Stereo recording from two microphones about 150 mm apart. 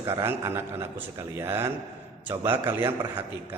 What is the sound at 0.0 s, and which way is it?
A man's voice, 15° right (ahead or behind).